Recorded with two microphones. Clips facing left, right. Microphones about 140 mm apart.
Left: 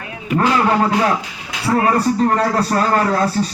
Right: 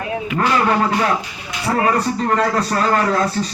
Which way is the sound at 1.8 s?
35° left (ahead or behind).